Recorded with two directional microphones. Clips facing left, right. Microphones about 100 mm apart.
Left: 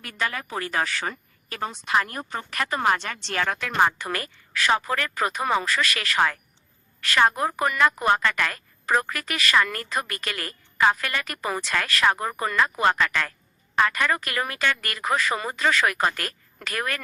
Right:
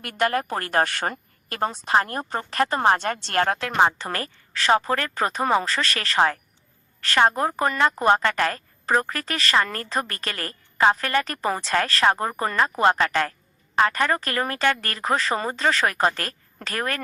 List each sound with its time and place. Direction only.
0.0 s a woman's voice: 55° right (ahead or behind)
1.6 s a woman's voice: 40° right (ahead or behind)
3.6 s a woman's voice: 25° right (ahead or behind)
8.2 s a woman's voice: 35° right (ahead or behind)